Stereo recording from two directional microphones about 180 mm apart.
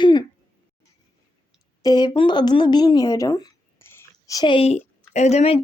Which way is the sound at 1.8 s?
20° left (ahead or behind).